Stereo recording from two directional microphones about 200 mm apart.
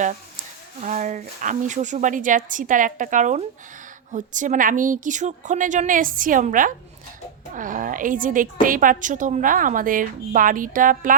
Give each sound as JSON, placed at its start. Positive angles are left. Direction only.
{"t": 0.8, "sound": "a woman's voice", "side_deg": -35}